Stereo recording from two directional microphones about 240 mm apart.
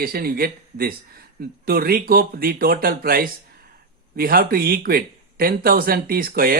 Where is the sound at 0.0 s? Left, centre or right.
Right.